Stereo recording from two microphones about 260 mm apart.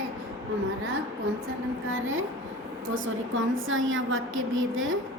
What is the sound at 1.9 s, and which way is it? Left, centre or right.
A woman's voice, right.